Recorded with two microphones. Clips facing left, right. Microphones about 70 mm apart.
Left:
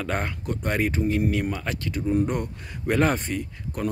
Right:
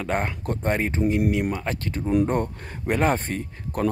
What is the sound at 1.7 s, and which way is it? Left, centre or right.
Speech, right.